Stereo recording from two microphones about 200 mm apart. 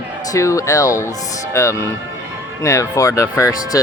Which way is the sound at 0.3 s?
15° left (ahead or behind).